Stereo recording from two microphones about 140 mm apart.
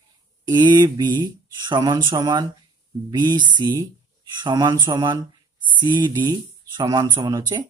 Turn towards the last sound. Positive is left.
turn(degrees=-30)  # may be behind; listen again after turning